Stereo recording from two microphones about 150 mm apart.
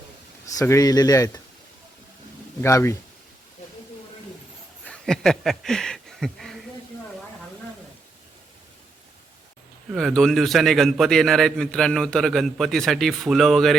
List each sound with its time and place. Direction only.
0.4 s speech: 20° left (ahead or behind)
2.6 s speech: 20° left (ahead or behind)
4.9 s speech: 5° left (ahead or behind)
9.9 s a man's voice: centre (ahead or behind)